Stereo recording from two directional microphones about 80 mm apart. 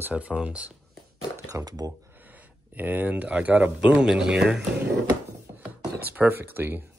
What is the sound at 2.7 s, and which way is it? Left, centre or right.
Speech, right.